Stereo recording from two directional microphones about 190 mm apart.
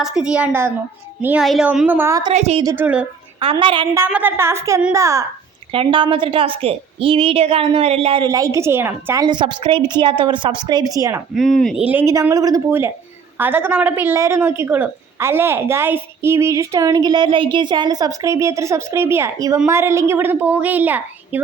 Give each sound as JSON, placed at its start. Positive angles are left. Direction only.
{"t": 0.0, "sound": "a woman's voice", "side_deg": -5}
{"t": 2.3, "sound": "a woman's voice", "side_deg": -35}
{"t": 2.6, "sound": "a woman's voice", "side_deg": -10}
{"t": 3.4, "sound": "a woman's voice", "side_deg": -25}
{"t": 3.9, "sound": "a woman's voice", "side_deg": -10}
{"t": 5.7, "sound": "a woman's voice", "side_deg": -30}
{"t": 9.2, "sound": "a woman's voice", "side_deg": -25}
{"t": 11.6, "sound": "a woman's voice", "side_deg": -5}